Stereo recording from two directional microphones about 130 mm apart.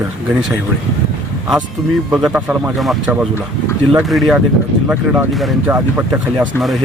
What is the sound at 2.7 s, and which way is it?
A man's voice, centre (ahead or behind).